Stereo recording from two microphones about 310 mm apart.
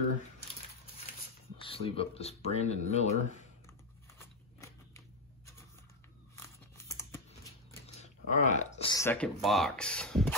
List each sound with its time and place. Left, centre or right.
1.6 s speech: centre
4.2 s a sound: centre
6.3 s tearing: centre
8.0 s speech: left; by 10.3 s centre